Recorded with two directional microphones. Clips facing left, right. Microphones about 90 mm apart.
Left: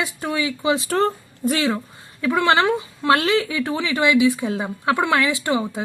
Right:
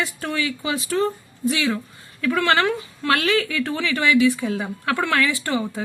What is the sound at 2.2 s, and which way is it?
Speech, 20° left (ahead or behind).